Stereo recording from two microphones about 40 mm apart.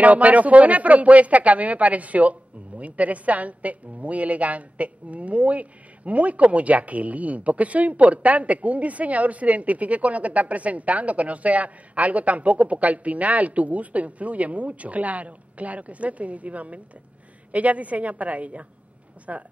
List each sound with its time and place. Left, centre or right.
0.0 s a woman's voice: right